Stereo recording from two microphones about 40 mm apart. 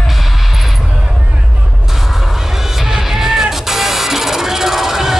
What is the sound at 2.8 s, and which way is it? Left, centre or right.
Music, centre.